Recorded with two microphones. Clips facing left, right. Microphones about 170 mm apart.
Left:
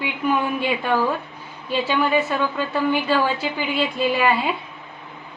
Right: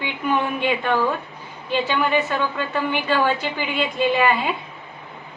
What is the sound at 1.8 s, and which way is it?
A woman's voice, 10° left (ahead or behind).